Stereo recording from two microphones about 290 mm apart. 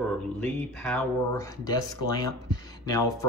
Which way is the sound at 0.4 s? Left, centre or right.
Centre.